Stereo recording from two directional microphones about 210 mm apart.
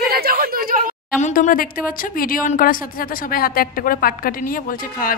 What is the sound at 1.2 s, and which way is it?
A woman's voice, 40° left (ahead or behind).